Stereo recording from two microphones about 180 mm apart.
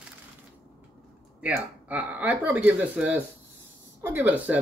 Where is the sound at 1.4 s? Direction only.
10° right (ahead or behind).